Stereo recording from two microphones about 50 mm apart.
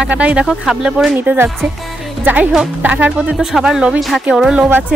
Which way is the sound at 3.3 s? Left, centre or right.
Centre.